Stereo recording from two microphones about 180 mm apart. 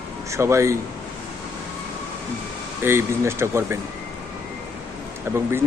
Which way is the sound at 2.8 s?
15° right (ahead or behind).